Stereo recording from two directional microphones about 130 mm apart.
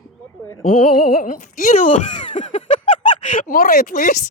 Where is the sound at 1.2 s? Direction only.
90° left.